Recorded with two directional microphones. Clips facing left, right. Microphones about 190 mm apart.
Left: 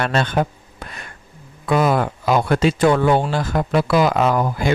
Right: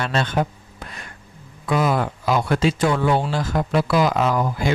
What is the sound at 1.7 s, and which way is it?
Speech, 55° left (ahead or behind).